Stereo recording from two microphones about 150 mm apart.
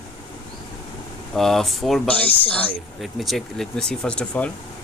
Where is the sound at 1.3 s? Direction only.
Centre (ahead or behind).